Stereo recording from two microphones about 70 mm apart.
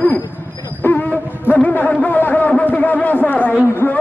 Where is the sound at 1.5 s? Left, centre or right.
Left.